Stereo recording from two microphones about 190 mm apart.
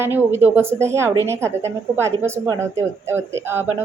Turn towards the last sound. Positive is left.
turn(degrees=-10)  # may be behind; listen again after turning